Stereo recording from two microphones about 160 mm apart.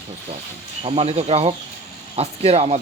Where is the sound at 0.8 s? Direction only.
40° right (ahead or behind).